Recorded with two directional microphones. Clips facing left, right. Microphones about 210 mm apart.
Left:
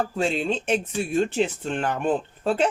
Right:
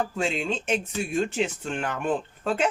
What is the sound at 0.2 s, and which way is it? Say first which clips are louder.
Speech: left 3 dB; 35° left (ahead or behind).